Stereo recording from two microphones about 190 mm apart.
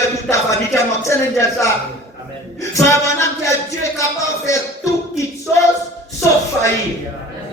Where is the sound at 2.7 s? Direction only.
15° left (ahead or behind).